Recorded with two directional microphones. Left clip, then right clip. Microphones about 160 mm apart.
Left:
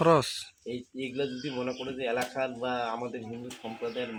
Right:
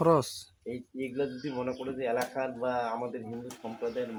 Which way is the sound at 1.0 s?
45° left (ahead or behind).